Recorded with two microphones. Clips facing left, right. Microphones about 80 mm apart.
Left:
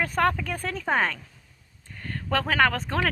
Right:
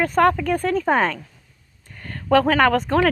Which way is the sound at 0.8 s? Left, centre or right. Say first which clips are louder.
Right 2 dB; right.